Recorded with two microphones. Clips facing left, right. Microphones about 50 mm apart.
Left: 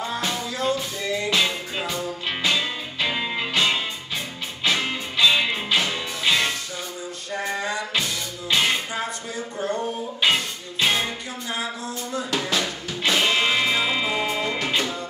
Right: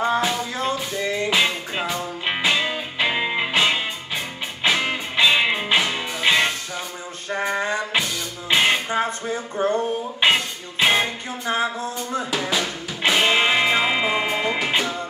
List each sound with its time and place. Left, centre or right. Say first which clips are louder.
0.2 s music: right 2 dB; right
7.2 s a sound: right 4 dB; right
7.9 s music: right 2 dB; centre
12.3 s drum: even; centre
13.0 s music: right 3 dB; right